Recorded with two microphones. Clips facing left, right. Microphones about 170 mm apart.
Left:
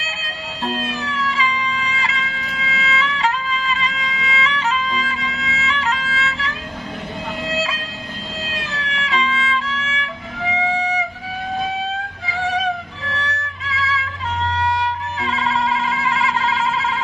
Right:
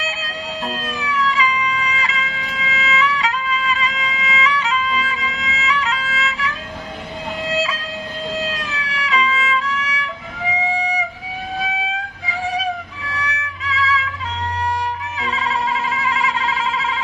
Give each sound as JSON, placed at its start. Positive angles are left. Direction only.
{"t": 0.7, "sound": "music", "side_deg": 30}
{"t": 8.5, "sound": "music", "side_deg": 30}
{"t": 10.8, "sound": "music", "side_deg": -10}
{"t": 13.2, "sound": "music", "side_deg": 30}
{"t": 16.0, "sound": "a sound", "side_deg": 30}